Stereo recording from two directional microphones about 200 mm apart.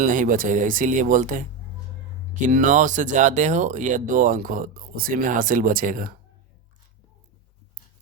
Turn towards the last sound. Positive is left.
turn(degrees=-45)  # may be behind; listen again after turning